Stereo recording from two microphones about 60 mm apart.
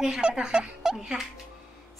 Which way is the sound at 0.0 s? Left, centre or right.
Centre.